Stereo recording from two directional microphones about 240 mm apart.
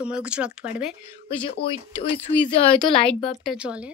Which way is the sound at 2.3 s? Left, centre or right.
Left.